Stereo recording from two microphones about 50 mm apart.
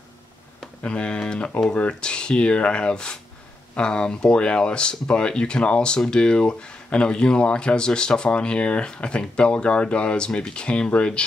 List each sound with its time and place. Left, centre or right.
0.8 s speech: left